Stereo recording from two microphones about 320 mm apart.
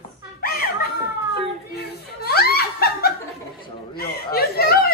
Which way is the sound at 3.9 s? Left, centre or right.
Left.